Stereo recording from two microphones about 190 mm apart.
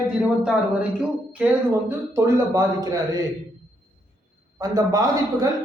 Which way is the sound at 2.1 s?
15° right (ahead or behind).